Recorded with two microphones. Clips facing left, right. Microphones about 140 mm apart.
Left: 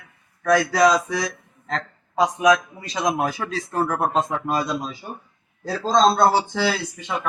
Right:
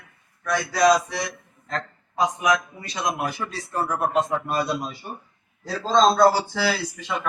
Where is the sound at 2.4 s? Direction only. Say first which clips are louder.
Left 5 dB; 90° left.